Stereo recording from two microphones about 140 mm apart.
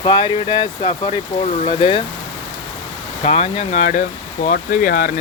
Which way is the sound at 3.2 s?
45° left (ahead or behind).